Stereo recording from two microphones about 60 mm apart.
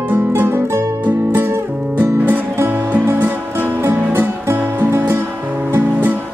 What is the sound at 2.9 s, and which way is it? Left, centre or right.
Music, right.